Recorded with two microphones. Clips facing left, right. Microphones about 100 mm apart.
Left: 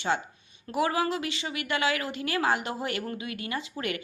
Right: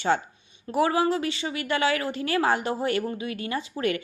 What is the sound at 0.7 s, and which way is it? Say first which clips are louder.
A woman's voice: right 4 dB; 30° right (ahead or behind).